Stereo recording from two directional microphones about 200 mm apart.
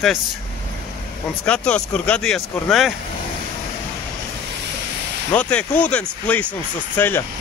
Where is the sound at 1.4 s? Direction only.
5° left (ahead or behind).